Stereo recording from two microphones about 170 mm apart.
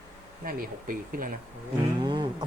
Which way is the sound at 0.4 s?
55° right (ahead or behind).